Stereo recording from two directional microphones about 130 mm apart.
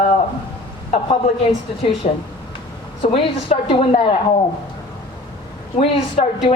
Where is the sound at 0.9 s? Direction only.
50° left (ahead or behind).